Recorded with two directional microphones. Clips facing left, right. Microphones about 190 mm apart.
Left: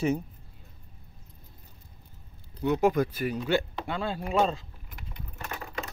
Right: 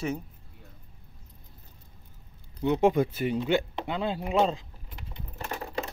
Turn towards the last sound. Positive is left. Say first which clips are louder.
# right 3 dB
turn(degrees=-35)  # may be behind; listen again after turning